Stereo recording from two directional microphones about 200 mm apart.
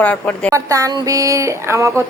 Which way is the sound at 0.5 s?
15° right (ahead or behind).